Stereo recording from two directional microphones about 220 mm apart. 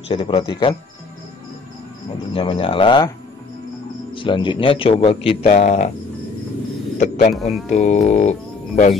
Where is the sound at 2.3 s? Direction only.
25° left (ahead or behind).